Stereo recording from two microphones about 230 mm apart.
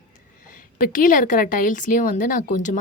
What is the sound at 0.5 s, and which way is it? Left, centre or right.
Speech, left.